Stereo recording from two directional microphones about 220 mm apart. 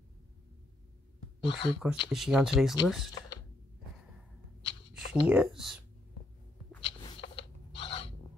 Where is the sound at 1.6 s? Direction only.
20° left (ahead or behind).